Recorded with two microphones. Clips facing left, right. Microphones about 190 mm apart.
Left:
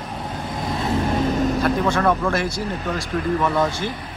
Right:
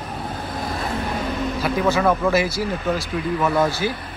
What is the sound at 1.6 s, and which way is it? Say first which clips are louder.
Speech: right 4 dB; 5° right (ahead or behind).